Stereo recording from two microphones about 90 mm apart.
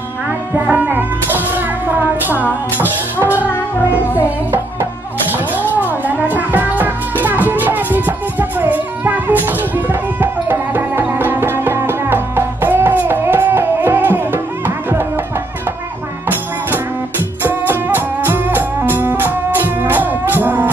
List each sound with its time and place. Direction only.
0.7 s music: 20° right (ahead or behind)
3.7 s music: 25° left (ahead or behind)
5.8 s music: 20° right (ahead or behind)
17.4 s music: 25° right (ahead or behind)